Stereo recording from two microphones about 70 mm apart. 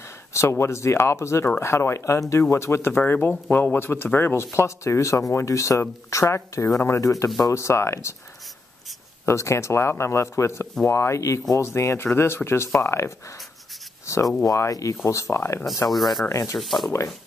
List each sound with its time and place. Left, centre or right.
0.3 s speech: left
3.1 s speech: left
7.0 s speech: left
9.2 s speech: left
15.9 s speech: centre
16.3 s speech: left
16.5 s speech: centre